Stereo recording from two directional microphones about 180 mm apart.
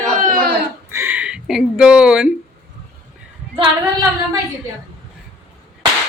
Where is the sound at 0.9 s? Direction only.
10° right (ahead or behind).